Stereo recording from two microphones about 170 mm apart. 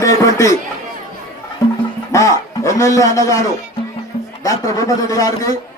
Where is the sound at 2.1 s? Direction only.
20° left (ahead or behind).